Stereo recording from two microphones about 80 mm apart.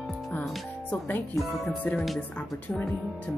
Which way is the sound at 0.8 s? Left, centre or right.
Left.